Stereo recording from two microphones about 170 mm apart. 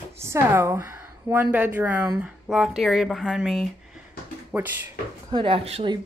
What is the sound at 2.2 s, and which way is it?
Speech, centre (ahead or behind).